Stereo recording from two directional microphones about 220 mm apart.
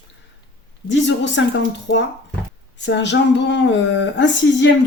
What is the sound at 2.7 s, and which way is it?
Speech, 55° left (ahead or behind).